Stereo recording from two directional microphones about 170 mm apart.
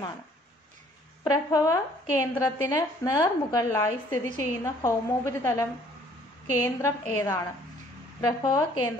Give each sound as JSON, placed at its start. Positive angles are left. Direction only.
{"t": 1.2, "sound": "a woman's voice", "side_deg": 20}